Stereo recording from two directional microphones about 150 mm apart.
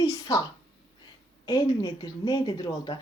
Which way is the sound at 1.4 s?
30° left (ahead or behind).